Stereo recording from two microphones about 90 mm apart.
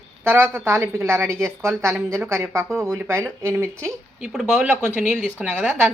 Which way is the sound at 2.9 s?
25° right (ahead or behind).